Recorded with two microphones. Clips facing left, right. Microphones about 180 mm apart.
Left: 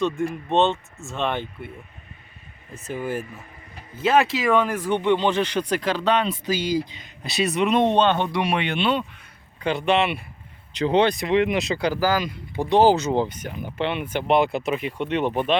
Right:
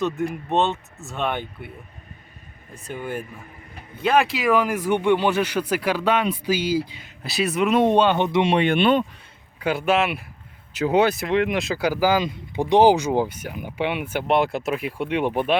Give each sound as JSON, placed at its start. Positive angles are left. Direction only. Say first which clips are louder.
{"t": 0.0, "sound": "speech", "louder": "even", "side_deg": 0}
{"t": 2.7, "sound": "speech", "louder": "left 2 dB", "side_deg": 5}
{"t": 8.5, "sound": "speech", "louder": "right 5 dB", "side_deg": -50}
{"t": 9.6, "sound": "speech", "louder": "even", "side_deg": -5}